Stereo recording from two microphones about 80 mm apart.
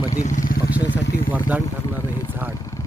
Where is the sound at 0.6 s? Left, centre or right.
Centre.